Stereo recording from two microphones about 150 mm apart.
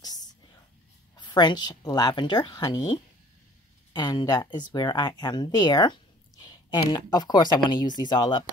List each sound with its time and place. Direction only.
0.0 s whispering: 25° left (ahead or behind)
1.1 s speech: 30° left (ahead or behind)